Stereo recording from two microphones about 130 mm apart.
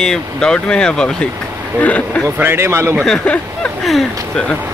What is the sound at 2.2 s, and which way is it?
Speech, 20° right (ahead or behind).